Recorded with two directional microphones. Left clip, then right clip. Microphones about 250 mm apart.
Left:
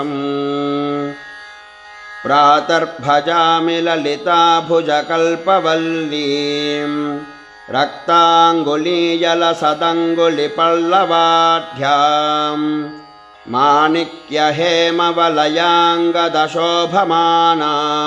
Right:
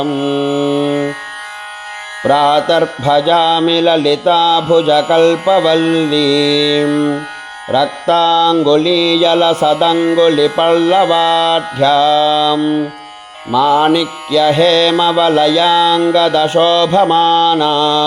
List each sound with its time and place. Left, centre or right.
0.0 s carnatic music: centre
2.2 s mantra: centre